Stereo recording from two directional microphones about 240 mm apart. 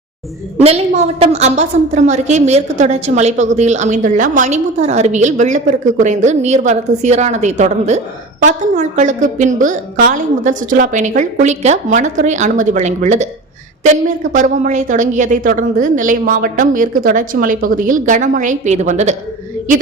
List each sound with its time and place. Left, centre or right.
0.6 s a woman's voice: right
14.3 s a woman's voice: right